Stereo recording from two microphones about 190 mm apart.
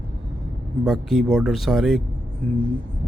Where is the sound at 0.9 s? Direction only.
Centre (ahead or behind).